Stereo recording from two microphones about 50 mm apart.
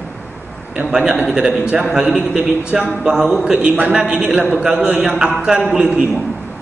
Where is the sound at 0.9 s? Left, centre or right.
Centre.